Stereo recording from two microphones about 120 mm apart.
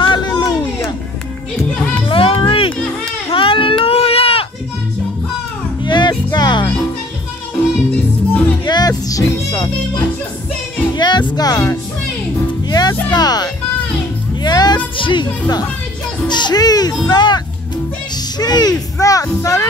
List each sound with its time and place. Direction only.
0.0 s a sound: 40° left (ahead or behind)
1.6 s music: 10° left (ahead or behind)
2.0 s music: 50° left (ahead or behind)
3.3 s baby cry: 50° left (ahead or behind)
5.9 s music: 40° left (ahead or behind)
7.9 s music: 10° left (ahead or behind)
8.6 s music: 35° left (ahead or behind)
11.0 s music: 40° left (ahead or behind)
12.6 s music: 35° left (ahead or behind)
15.0 s a child's voice: 40° left (ahead or behind)